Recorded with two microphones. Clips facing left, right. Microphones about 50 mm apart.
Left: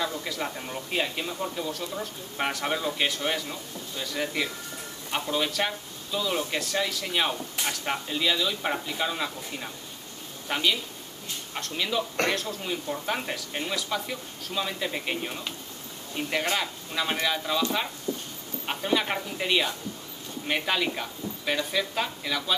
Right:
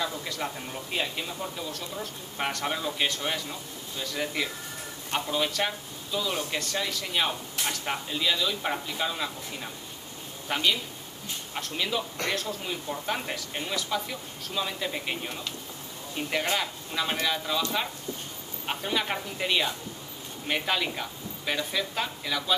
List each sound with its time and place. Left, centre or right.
0.0 s speech: centre